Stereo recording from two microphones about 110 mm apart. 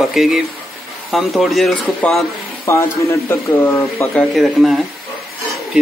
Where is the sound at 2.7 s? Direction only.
25° left (ahead or behind).